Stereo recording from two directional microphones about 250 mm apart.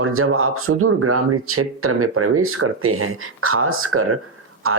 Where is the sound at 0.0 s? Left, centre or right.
Right.